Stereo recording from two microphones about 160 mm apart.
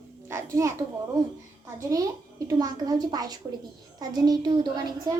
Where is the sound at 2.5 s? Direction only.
25° right (ahead or behind).